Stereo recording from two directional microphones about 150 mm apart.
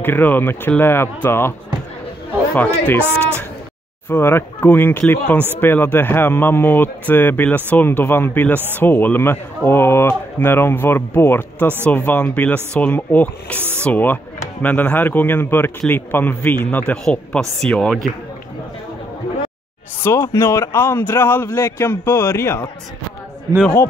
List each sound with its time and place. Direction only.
0.0 s speech: 10° left (ahead or behind)
2.5 s speech: 10° left (ahead or behind)
4.1 s speech: 15° left (ahead or behind)
13.6 s speech: 15° right (ahead or behind)
13.8 s speech: 10° left (ahead or behind)
20.0 s speech: 20° left (ahead or behind)
23.6 s speech: 10° left (ahead or behind)